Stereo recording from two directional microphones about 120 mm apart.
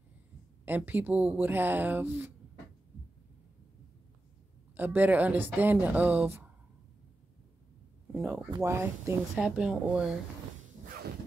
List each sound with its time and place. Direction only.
0.7 s speech: 15° right (ahead or behind)
4.7 s speech: 15° right (ahead or behind)
8.1 s speech: 15° right (ahead or behind)
9.3 s speech: 5° right (ahead or behind)